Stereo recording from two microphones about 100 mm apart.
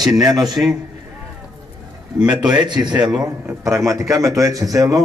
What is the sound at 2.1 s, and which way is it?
A man's voice, 10° right (ahead or behind).